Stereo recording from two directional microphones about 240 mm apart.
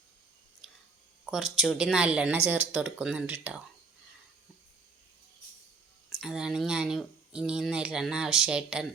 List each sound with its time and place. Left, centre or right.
0.6 s chewing: centre
1.2 s speech: centre
6.1 s speech: centre